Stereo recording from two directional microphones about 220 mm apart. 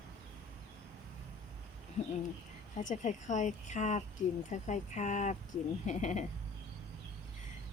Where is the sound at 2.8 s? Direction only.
35° left (ahead or behind).